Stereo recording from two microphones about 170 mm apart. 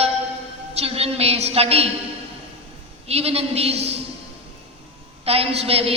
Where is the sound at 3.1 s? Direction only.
35° right (ahead or behind).